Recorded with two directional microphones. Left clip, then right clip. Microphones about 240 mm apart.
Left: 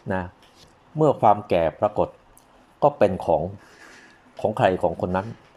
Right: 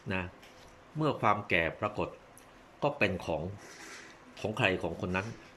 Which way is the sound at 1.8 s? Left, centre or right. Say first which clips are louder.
Left 12 dB; left.